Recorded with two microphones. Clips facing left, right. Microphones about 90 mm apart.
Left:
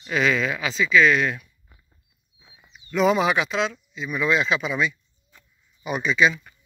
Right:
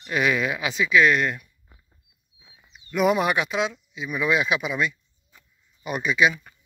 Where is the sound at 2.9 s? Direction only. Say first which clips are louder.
Left 1 dB; 10° right (ahead or behind).